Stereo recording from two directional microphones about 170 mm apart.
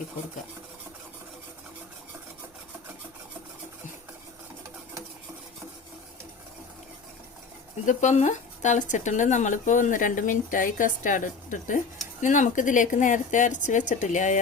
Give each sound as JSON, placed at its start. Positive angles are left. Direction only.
{"t": 7.9, "sound": "speech", "side_deg": 45}